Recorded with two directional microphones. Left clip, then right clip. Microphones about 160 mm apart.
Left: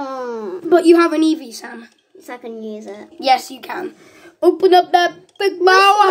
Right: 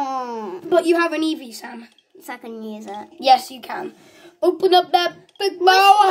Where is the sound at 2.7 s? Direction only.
30° right (ahead or behind).